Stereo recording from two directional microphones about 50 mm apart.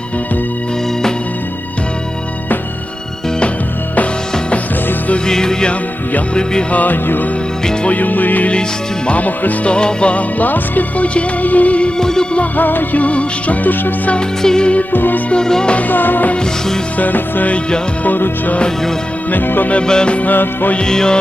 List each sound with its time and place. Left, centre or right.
5.1 s music: centre
6.7 s music: left
9.7 s music: centre
11.9 s music: centre
12.4 s music: left
14.2 s music: centre
14.9 s music: left
15.3 s music: centre
15.7 s music: left
19.3 s music: left
19.7 s music: centre
20.1 s music: left
20.7 s music: centre